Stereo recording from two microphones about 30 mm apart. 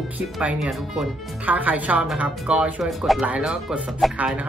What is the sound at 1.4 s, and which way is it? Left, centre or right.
Speech, right.